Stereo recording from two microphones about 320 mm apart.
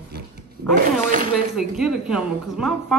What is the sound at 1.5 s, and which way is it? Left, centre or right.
A woman's voice, centre.